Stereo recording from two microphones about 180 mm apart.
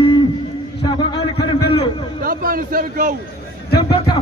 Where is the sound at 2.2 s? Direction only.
50° right (ahead or behind).